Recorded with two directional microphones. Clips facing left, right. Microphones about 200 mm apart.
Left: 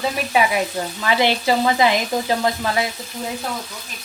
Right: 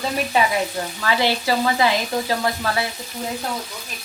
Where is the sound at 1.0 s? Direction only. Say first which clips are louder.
Left 2 dB; 20° left (ahead or behind).